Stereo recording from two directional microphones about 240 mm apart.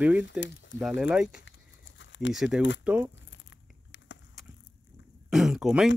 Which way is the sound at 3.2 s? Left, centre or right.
Left.